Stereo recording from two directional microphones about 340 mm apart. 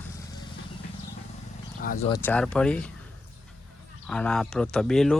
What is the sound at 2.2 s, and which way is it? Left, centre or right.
Speech, centre.